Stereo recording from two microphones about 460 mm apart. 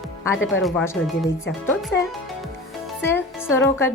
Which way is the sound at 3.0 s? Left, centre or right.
Centre.